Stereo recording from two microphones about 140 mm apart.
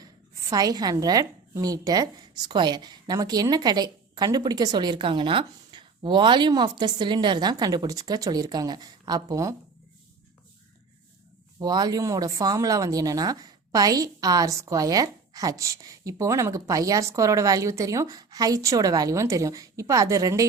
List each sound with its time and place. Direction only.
0.5 s speech: 25° right (ahead or behind)
11.6 s speech: 30° right (ahead or behind)